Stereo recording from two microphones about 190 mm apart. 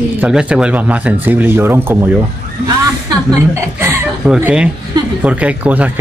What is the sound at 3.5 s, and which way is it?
Speech, 15° right (ahead or behind).